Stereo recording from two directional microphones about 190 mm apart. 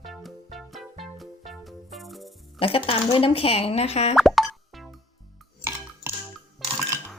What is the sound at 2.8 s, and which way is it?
Speech, 30° left (ahead or behind).